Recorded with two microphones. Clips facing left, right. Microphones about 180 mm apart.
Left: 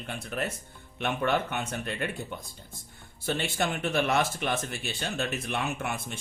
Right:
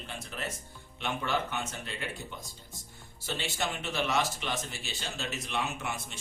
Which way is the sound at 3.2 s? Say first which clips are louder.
Left 5 dB; 55° left (ahead or behind).